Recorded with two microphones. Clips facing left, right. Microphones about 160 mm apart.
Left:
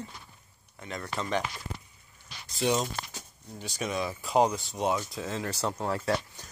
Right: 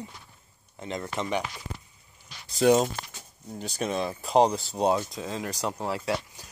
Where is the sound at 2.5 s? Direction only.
45° right (ahead or behind).